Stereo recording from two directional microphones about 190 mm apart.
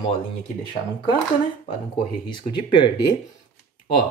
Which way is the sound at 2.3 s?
25° left (ahead or behind).